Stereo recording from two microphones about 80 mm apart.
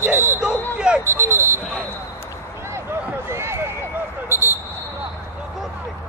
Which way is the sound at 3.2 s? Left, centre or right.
Right.